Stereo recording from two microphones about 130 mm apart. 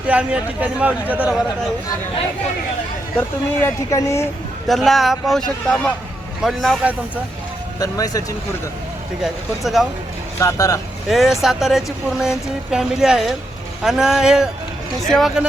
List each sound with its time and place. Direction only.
0.1 s a man's voice: 10° right (ahead or behind)
3.2 s speech: 20° left (ahead or behind)
4.7 s speech: centre (ahead or behind)
7.8 s speech: 25° left (ahead or behind)
9.2 s speech: centre (ahead or behind)
10.4 s speech: 25° left (ahead or behind)
11.1 s speech: centre (ahead or behind)